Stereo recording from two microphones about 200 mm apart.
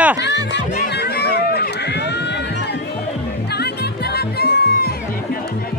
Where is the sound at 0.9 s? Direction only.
55° left (ahead or behind).